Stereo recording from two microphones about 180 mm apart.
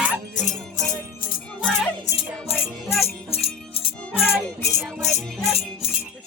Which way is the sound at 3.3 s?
35° left (ahead or behind).